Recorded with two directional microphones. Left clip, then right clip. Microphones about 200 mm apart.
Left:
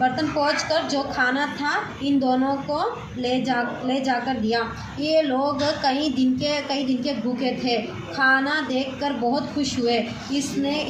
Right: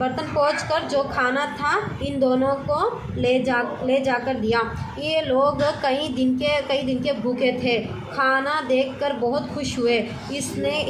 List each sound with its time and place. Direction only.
0.0 s a woman's voice: 45° right (ahead or behind)